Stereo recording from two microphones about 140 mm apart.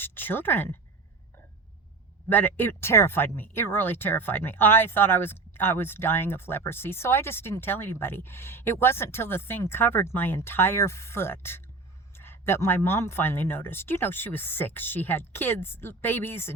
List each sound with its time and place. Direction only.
0.0 s speech: 15° left (ahead or behind)
2.3 s speech: 15° left (ahead or behind)